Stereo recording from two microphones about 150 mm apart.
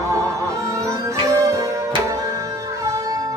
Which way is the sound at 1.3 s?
20° right (ahead or behind).